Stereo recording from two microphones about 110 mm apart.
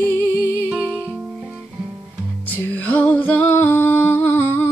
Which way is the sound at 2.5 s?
15° left (ahead or behind).